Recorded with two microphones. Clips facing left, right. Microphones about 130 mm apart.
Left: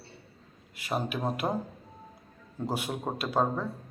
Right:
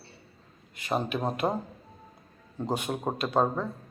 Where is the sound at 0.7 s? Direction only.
5° left (ahead or behind).